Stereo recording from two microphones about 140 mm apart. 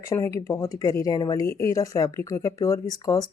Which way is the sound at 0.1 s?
20° left (ahead or behind).